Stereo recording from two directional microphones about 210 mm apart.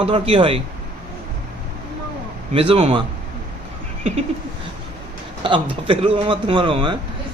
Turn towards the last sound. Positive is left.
turn(degrees=-25)  # may be behind; listen again after turning